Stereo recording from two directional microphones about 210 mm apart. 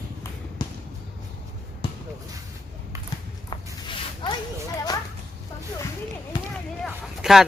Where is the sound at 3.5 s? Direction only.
20° left (ahead or behind).